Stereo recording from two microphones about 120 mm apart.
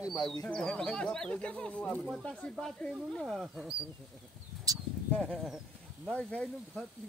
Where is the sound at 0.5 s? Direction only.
5° left (ahead or behind).